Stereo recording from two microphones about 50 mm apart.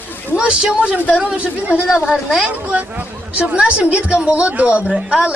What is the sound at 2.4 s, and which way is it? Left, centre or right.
A woman's voice, right.